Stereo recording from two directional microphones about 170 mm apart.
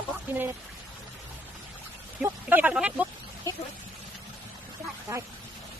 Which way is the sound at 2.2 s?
10° right (ahead or behind).